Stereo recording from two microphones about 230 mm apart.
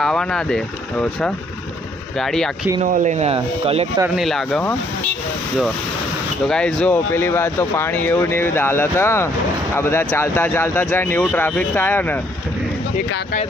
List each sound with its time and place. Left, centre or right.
0.0 s speech: centre
2.8 s speech: right
4.0 s speech: centre
6.5 s speech: centre